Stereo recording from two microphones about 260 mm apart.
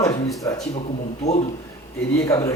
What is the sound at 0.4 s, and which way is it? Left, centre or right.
Speech, centre.